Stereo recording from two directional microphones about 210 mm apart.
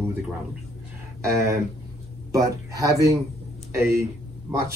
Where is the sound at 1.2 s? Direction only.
15° right (ahead or behind).